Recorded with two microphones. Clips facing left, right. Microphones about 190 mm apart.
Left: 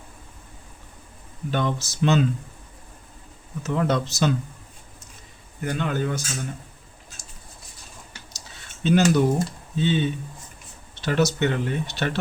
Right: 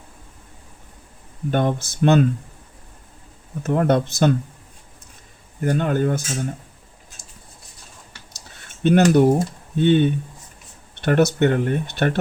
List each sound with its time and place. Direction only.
1.5 s speech: 50° right (ahead or behind)
3.6 s speech: 55° right (ahead or behind)
5.5 s speech: 45° right (ahead or behind)
8.5 s cutlery: 55° right (ahead or behind)
9.7 s speech: 60° right (ahead or behind)